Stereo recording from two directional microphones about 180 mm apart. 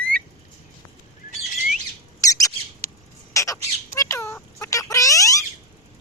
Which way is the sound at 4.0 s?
15° left (ahead or behind).